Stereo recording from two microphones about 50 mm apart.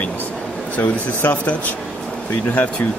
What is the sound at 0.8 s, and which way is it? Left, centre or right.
Speech, left.